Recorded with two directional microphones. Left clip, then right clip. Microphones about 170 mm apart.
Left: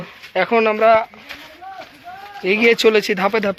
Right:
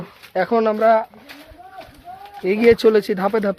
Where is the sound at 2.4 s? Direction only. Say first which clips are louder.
Even; 25° right (ahead or behind).